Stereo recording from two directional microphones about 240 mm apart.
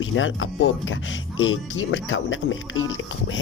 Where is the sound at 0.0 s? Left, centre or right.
Left.